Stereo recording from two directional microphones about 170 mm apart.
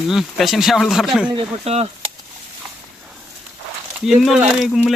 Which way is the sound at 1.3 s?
35° right (ahead or behind).